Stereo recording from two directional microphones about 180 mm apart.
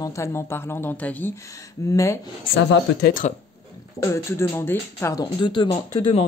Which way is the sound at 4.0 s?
15° left (ahead or behind).